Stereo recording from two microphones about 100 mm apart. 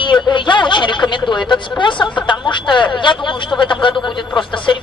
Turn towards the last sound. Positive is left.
turn(degrees=55)  # may be behind; listen again after turning